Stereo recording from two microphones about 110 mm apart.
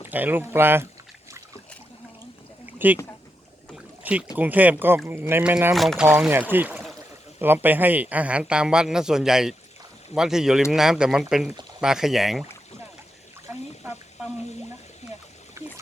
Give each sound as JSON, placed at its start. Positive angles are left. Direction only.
{"t": 0.1, "sound": "speech", "side_deg": -15}
{"t": 2.7, "sound": "speech", "side_deg": -15}
{"t": 4.0, "sound": "a man's voice", "side_deg": -10}
{"t": 5.7, "sound": "speech", "side_deg": 0}
{"t": 6.1, "sound": "a man's voice", "side_deg": -15}
{"t": 15.6, "sound": "pig", "side_deg": -25}